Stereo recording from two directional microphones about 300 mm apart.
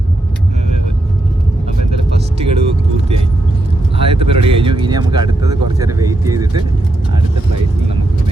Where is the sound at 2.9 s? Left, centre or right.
Centre.